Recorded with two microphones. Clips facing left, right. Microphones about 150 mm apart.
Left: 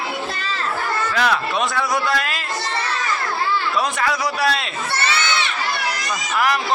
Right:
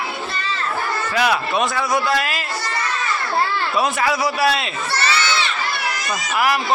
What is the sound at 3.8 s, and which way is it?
Speech, 5° right (ahead or behind).